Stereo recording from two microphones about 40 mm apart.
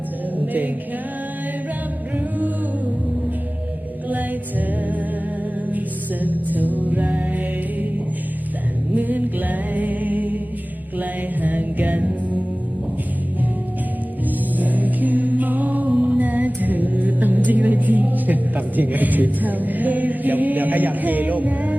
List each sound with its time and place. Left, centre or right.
0.3 s music: right
2.1 s a capella: right
4.1 s music: right
6.2 s music: right
9.0 s music: right
14.6 s music: right
15.9 s music: right